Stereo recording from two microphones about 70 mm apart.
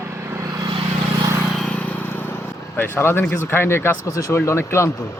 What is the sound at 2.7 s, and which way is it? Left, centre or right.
Speech, left.